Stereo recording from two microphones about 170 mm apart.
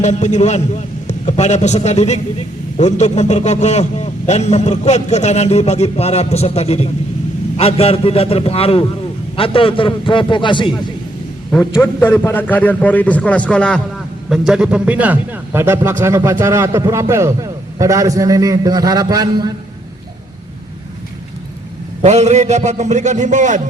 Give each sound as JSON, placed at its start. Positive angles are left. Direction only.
{"t": 0.0, "sound": "a man's voice", "side_deg": 45}
{"t": 11.8, "sound": "a man's voice", "side_deg": 10}
{"t": 14.3, "sound": "a man's voice", "side_deg": -5}
{"t": 22.0, "sound": "a man's voice", "side_deg": -40}